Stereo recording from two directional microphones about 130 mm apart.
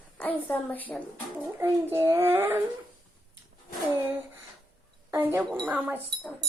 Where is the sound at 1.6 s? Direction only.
20° right (ahead or behind).